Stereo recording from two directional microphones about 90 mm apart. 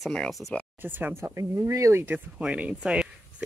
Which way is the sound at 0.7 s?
20° right (ahead or behind).